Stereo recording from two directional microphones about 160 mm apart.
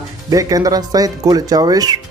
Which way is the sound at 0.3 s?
20° right (ahead or behind).